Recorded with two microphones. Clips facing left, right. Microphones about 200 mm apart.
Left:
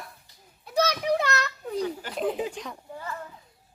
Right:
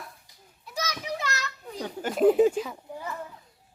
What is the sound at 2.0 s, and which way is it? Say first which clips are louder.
Speech: right 8 dB; 45° right (ahead or behind).